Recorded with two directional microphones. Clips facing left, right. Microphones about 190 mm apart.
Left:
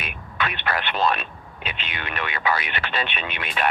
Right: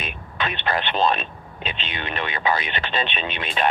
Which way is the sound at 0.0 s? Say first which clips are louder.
Even; 25° right (ahead or behind).